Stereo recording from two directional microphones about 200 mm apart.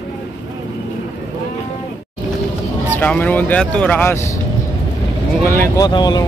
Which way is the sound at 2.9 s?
10° left (ahead or behind).